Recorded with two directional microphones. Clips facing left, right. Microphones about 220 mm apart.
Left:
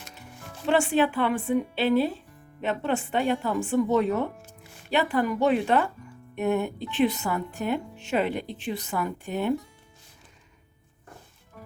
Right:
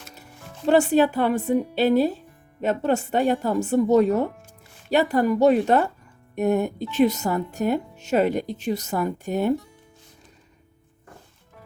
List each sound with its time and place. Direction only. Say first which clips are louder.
0.7 s speech: right 5 dB; 40° right (ahead or behind)